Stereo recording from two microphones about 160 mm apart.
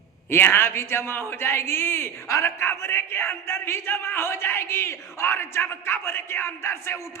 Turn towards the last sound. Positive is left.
turn(degrees=15)  # may be behind; listen again after turning